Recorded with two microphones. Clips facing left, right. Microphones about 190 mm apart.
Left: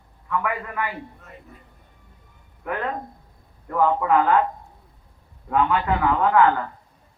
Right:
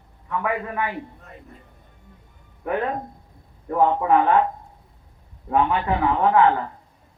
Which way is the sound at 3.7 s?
30° right (ahead or behind).